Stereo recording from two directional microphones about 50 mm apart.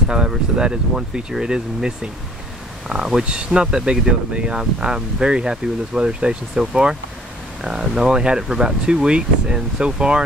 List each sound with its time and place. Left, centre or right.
0.1 s speech: centre